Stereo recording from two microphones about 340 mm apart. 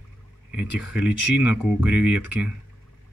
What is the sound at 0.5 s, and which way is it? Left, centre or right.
Speech, centre.